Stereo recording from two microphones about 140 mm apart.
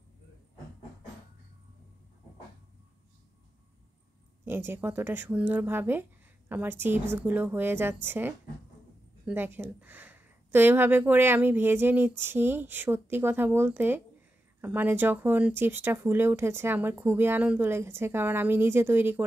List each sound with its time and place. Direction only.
4.5 s speech: 15° right (ahead or behind)